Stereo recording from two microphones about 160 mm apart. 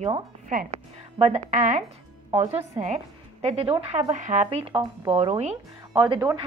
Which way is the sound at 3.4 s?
40° right (ahead or behind).